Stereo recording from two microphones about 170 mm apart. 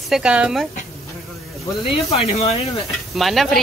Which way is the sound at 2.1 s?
40° left (ahead or behind).